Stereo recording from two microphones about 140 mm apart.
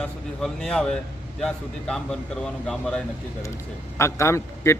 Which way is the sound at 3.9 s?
20° left (ahead or behind).